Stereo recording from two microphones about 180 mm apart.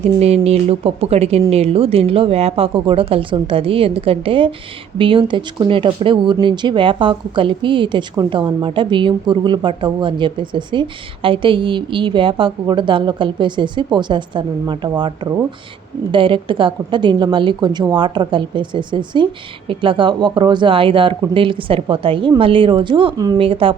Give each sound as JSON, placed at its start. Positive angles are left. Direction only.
{"t": 0.2, "sound": "speech", "side_deg": -35}